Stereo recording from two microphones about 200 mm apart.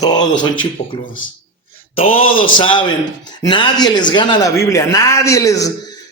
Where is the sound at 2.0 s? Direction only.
30° left (ahead or behind).